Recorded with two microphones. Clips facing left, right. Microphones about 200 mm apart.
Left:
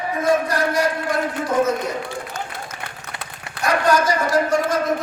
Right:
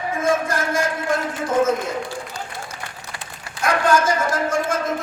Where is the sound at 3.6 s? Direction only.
50° right (ahead or behind).